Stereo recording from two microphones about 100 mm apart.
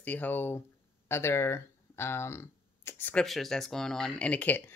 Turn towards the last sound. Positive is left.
turn(degrees=20)  # may be behind; listen again after turning